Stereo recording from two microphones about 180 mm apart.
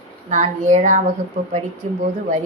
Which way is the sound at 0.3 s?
45° right (ahead or behind).